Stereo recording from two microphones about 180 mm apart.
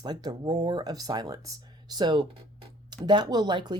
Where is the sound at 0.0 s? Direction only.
20° right (ahead or behind).